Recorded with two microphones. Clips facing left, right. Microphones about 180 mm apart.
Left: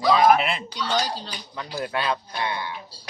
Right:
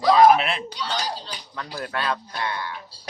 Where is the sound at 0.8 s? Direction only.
55° left (ahead or behind).